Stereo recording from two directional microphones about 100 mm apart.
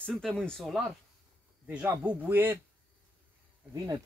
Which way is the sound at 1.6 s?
15° right (ahead or behind).